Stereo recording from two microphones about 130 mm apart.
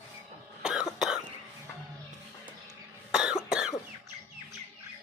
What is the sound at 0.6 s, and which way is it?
Cough, 5° right (ahead or behind).